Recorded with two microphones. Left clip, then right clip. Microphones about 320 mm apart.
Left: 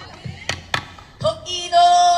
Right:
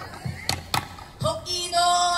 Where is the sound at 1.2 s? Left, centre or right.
Left.